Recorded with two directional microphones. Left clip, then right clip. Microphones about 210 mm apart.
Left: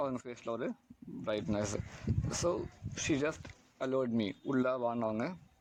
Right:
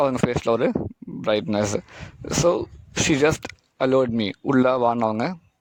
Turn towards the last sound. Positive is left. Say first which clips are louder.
# right 13 dB
turn(degrees=-45)  # may be behind; listen again after turning